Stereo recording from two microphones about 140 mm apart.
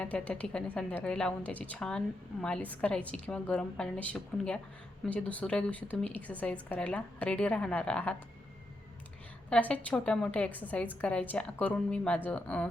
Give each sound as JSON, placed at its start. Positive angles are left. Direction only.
{"t": 0.0, "sound": "a woman's voice", "side_deg": 10}
{"t": 9.5, "sound": "a woman's voice", "side_deg": 10}